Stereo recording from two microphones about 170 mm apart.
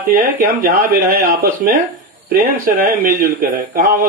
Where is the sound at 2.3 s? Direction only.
60° right (ahead or behind).